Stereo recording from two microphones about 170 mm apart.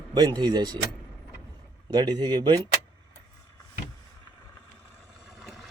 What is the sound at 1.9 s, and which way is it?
Speech, 25° right (ahead or behind).